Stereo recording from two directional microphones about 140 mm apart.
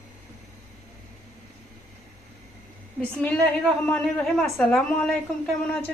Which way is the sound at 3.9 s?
5° left (ahead or behind).